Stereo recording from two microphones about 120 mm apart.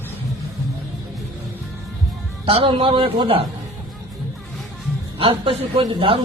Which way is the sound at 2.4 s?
50° right (ahead or behind).